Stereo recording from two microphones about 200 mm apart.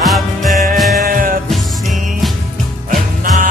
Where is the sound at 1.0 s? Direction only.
45° right (ahead or behind).